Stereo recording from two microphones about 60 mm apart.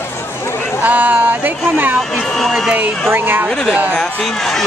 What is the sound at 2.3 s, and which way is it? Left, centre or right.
Speech, centre.